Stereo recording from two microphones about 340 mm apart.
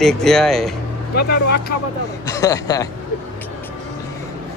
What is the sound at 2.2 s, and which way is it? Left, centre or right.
Speech, centre.